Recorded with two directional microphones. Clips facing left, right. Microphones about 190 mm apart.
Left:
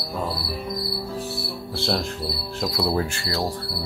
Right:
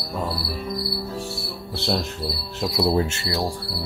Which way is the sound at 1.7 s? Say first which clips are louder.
Even; 20° right (ahead or behind).